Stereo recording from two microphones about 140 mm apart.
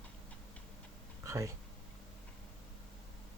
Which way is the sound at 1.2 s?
20° right (ahead or behind).